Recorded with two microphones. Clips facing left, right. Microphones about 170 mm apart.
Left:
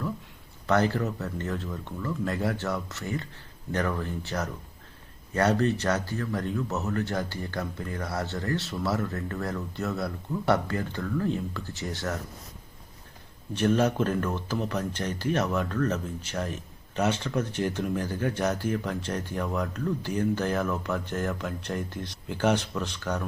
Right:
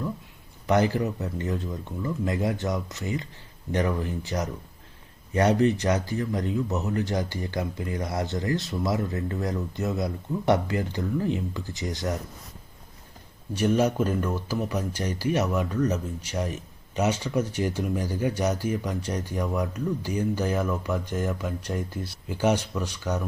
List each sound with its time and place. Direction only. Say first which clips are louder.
0.7 s speech: right 2 dB; 15° right (ahead or behind)
13.5 s speech: right 1 dB; 10° right (ahead or behind)